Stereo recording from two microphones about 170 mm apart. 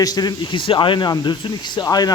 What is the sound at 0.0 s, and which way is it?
A man's voice, 25° left (ahead or behind).